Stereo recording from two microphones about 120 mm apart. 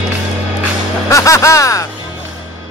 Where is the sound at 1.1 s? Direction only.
25° left (ahead or behind).